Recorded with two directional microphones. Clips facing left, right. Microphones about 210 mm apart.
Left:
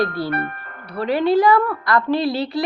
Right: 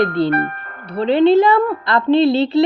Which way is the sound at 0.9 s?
25° right (ahead or behind).